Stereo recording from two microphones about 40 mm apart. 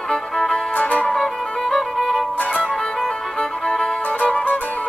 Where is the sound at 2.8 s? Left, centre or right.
Centre.